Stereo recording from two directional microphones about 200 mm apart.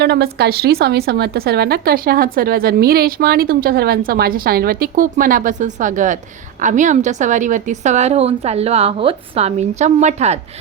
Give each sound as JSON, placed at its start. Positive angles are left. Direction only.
{"t": 0.0, "sound": "a woman's voice", "side_deg": -55}